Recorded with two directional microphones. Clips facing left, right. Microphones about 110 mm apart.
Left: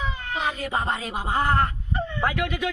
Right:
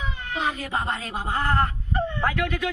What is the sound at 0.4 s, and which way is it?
Speech, 10° left (ahead or behind).